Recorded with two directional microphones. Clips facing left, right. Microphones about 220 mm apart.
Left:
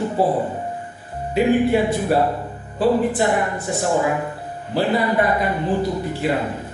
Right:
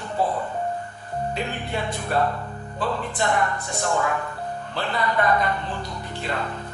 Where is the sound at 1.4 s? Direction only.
10° left (ahead or behind).